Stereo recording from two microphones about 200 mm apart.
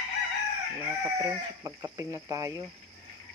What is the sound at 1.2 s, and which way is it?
Speech, 20° right (ahead or behind).